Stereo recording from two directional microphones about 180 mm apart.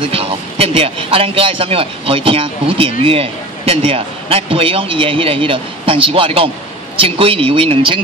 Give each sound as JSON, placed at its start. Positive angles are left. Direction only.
{"t": 0.0, "sound": "a man's voice", "side_deg": -30}